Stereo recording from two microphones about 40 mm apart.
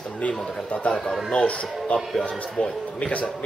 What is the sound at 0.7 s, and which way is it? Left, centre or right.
A man's voice, left.